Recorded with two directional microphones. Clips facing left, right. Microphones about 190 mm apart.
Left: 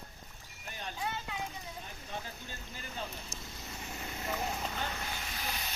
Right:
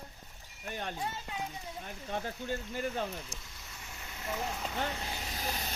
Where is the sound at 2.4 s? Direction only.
60° right (ahead or behind).